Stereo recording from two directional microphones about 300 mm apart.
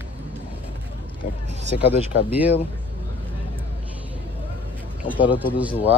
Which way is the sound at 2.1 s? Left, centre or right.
Left.